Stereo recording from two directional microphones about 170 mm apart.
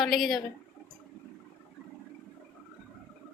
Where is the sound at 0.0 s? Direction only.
Centre (ahead or behind).